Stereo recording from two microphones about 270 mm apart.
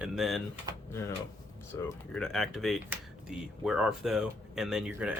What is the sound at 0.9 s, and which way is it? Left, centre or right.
Speech, centre.